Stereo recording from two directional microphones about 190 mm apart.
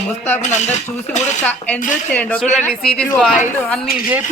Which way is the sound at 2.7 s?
Centre (ahead or behind).